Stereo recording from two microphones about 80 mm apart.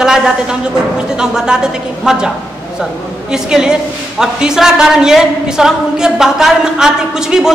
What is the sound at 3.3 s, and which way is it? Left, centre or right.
A woman's voice, centre.